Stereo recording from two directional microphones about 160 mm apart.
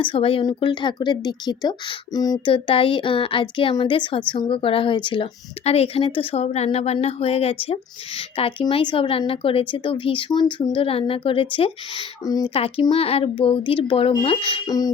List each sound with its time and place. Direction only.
0.0 s a woman's voice: 35° left (ahead or behind)
12.5 s a woman's voice: 35° left (ahead or behind)
14.7 s speech: 25° left (ahead or behind)